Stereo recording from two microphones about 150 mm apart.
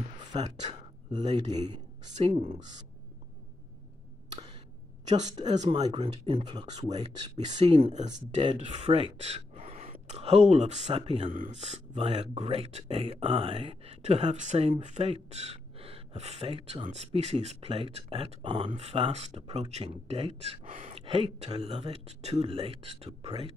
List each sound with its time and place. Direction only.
0.4 s speech: 50° right (ahead or behind)
5.0 s speech: 50° right (ahead or behind); by 6.8 s 30° right (ahead or behind)
6.8 s speech: 45° right (ahead or behind)
11.3 s speech: 55° right (ahead or behind)